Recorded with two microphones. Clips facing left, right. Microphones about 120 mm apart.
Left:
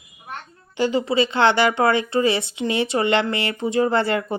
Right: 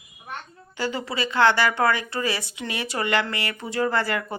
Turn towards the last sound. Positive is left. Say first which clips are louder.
# left 5 dB
turn(degrees=25)  # may be behind; listen again after turning